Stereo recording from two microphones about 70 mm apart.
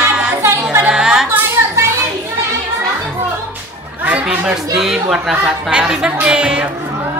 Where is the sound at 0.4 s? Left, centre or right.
Right.